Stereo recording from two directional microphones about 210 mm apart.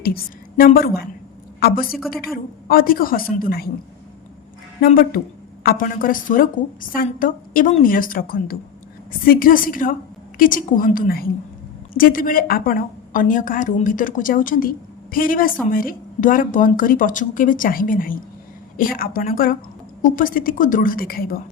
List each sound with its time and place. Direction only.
0.0 s a woman's voice: 45° left (ahead or behind)
1.9 s speech: centre (ahead or behind)
2.3 s a woman's voice: 45° left (ahead or behind)
4.8 s a woman's voice: 45° left (ahead or behind)